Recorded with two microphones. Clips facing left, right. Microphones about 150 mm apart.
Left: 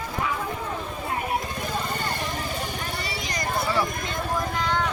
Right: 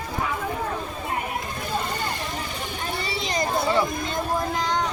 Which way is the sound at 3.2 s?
25° right (ahead or behind).